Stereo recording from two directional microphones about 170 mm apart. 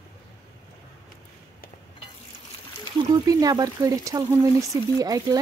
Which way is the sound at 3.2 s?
20° right (ahead or behind).